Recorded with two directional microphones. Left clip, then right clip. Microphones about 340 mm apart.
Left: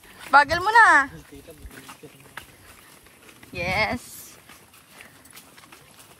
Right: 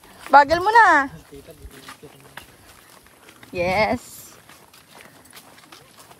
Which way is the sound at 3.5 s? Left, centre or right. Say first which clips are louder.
Right 4 dB; centre.